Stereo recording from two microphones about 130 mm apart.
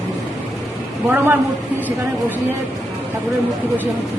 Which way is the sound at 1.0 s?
15° right (ahead or behind).